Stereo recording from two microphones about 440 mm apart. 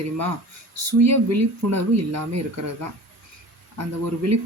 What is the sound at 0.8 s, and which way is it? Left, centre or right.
Speech, right.